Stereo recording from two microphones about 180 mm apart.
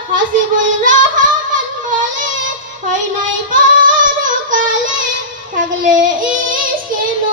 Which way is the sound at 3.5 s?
45° right (ahead or behind).